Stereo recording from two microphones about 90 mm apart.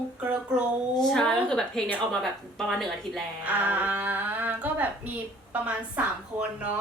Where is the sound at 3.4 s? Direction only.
20° right (ahead or behind).